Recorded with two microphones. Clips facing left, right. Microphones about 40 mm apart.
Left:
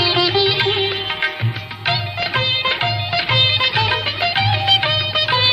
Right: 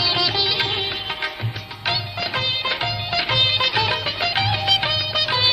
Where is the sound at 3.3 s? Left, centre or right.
Left.